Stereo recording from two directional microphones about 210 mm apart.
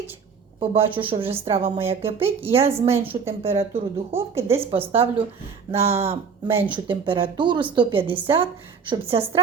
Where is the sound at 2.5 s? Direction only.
30° right (ahead or behind).